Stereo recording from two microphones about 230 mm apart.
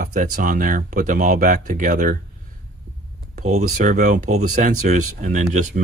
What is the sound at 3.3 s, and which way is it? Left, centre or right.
Speech, right.